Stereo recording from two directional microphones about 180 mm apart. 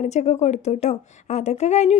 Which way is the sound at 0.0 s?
40° left (ahead or behind).